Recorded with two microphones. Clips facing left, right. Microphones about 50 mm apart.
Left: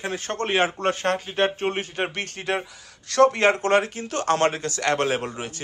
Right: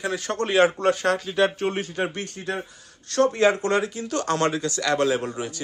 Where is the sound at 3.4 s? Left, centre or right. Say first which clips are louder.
Left 1 dB; left.